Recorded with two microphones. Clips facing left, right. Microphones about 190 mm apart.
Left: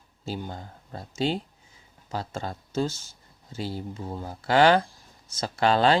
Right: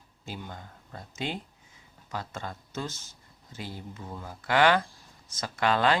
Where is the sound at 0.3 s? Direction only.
35° left (ahead or behind).